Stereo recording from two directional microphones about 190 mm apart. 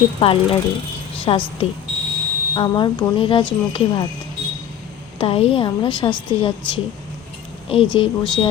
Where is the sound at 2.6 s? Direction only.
25° left (ahead or behind).